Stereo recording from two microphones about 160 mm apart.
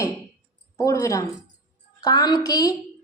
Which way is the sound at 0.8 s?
20° left (ahead or behind).